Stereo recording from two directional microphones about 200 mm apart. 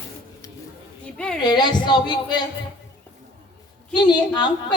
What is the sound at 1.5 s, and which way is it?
Speech, 20° left (ahead or behind).